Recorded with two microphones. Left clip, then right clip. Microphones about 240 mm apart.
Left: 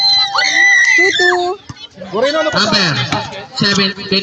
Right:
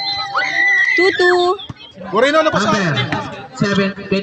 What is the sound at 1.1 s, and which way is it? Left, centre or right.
Speech, centre.